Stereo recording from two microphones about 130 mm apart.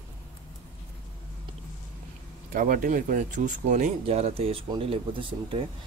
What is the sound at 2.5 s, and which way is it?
Speech, 90° right.